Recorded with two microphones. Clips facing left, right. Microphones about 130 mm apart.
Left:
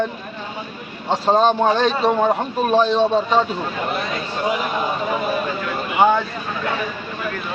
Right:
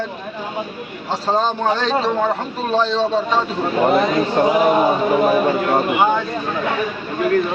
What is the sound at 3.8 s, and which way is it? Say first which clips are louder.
Speech: right 9 dB; 60° right (ahead or behind).